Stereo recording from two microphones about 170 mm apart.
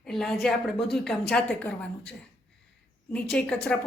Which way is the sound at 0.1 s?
Centre (ahead or behind).